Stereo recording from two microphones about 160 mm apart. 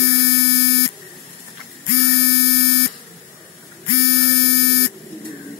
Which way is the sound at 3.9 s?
90° left.